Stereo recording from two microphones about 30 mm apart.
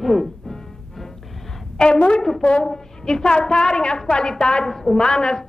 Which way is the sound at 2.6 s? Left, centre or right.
Left.